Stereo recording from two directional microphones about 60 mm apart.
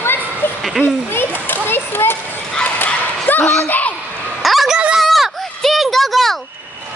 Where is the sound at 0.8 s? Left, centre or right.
Left.